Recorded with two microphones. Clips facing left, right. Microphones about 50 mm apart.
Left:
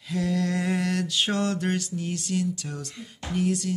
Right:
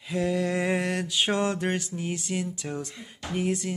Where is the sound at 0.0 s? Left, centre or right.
Centre.